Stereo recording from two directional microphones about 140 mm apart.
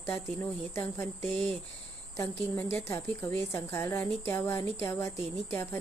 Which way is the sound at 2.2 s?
20° left (ahead or behind).